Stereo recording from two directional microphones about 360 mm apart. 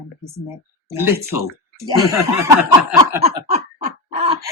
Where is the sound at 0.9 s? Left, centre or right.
Centre.